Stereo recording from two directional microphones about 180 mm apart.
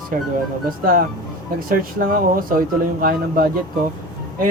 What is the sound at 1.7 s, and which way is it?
Speech, 55° right (ahead or behind).